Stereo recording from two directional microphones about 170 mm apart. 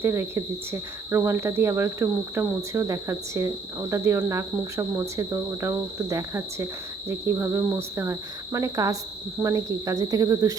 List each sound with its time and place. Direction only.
0.0 s speech: 15° right (ahead or behind)